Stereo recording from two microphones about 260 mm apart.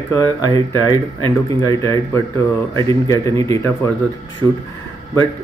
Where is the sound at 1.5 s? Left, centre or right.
Centre.